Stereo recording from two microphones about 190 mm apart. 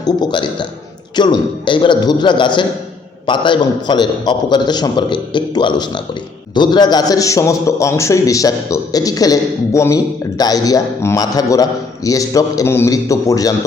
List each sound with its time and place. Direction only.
0.0 s a man's voice: 25° left (ahead or behind)